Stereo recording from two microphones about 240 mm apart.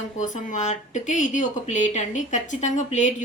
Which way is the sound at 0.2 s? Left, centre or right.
Left.